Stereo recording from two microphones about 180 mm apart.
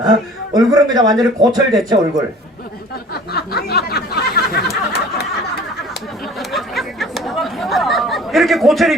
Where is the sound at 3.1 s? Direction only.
60° left (ahead or behind).